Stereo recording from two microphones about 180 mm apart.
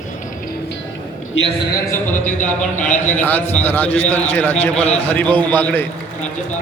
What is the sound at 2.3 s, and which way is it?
Speech, 45° left (ahead or behind).